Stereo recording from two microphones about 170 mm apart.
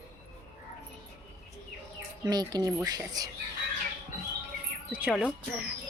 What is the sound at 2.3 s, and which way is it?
Speech, 25° right (ahead or behind).